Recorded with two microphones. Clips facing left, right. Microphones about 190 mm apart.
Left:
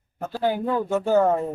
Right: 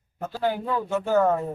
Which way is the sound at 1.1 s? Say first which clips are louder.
Left 1 dB; 25° left (ahead or behind).